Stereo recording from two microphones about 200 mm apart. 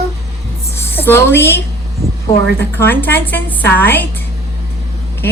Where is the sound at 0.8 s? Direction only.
10° left (ahead or behind).